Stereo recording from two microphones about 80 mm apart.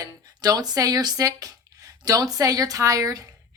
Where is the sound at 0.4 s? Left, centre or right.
Right.